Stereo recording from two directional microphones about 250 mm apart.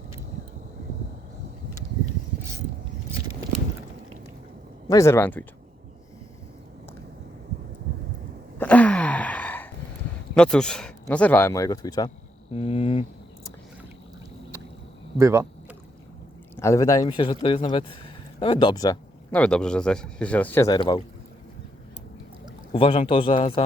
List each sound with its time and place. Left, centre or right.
4.9 s speech: centre
8.5 s gasp: centre
10.3 s speech: centre; by 13.5 s left
15.2 s speech: centre
16.6 s speech: centre
22.7 s speech: left